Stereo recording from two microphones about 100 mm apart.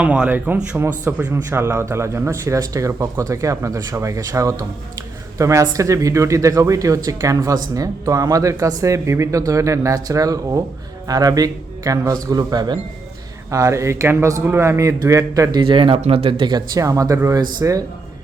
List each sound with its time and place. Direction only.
0.0 s speech: 15° right (ahead or behind)
1.2 s speech: 30° right (ahead or behind); by 12.8 s 45° right (ahead or behind)
13.5 s speech: 30° right (ahead or behind)
15.6 s speech: 55° right (ahead or behind)
16.0 s speech: 75° right (ahead or behind)
16.4 s speech: 45° right (ahead or behind)